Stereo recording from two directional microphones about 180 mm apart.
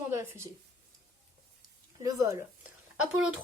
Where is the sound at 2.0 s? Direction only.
20° right (ahead or behind).